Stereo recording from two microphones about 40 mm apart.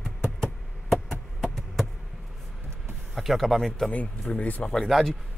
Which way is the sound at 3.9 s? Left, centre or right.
Left.